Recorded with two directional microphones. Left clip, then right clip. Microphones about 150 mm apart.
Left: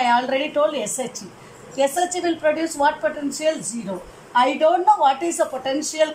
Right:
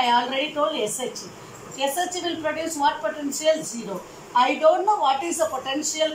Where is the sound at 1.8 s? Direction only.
45° left (ahead or behind).